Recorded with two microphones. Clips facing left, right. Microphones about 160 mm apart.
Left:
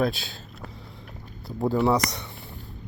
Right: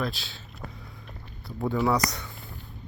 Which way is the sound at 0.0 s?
50° left (ahead or behind).